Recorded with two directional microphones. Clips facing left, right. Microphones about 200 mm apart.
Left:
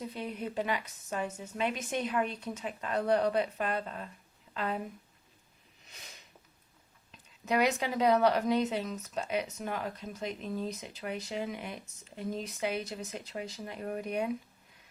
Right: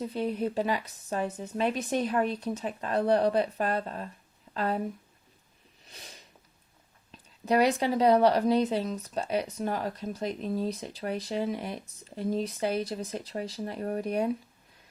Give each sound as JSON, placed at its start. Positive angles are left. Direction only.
{"t": 0.1, "sound": "a woman's voice", "side_deg": -35}
{"t": 5.9, "sound": "a sound", "side_deg": -35}
{"t": 7.4, "sound": "speech", "side_deg": -35}